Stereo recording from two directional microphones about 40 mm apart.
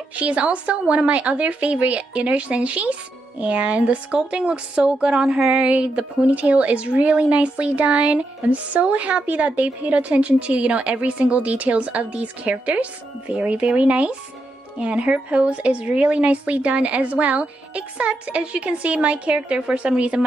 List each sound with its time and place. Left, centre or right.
0.1 s a woman's voice: right